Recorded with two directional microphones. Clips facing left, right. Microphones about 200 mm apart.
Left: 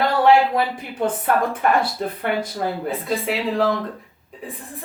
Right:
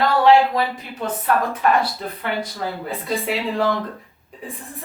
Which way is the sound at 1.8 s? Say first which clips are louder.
Left 2 dB; 50° left (ahead or behind).